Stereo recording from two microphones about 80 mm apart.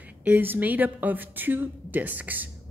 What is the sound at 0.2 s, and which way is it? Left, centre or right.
Speech, right.